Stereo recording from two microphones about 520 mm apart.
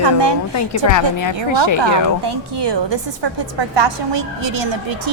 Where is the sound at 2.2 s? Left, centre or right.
Right.